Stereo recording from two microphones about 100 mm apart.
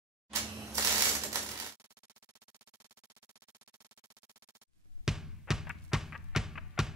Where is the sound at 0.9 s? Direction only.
30° right (ahead or behind).